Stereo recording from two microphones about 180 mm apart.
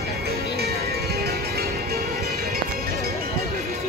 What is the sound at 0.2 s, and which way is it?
Music, 60° right (ahead or behind).